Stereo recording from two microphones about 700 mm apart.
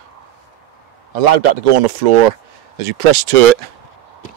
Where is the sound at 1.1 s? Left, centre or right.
Right.